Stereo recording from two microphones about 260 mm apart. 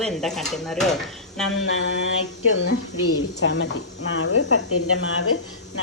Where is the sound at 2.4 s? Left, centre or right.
Left.